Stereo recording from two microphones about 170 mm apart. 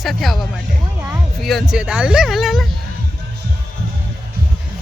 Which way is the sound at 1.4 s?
Centre (ahead or behind).